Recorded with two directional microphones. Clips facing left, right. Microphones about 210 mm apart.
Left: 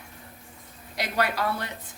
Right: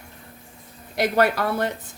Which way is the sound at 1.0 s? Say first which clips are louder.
Right 7 dB; 50° right (ahead or behind).